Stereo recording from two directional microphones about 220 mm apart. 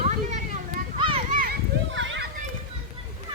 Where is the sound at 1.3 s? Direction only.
40° right (ahead or behind).